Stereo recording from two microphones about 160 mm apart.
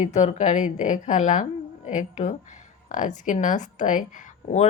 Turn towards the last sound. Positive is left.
turn(degrees=50)  # may be behind; listen again after turning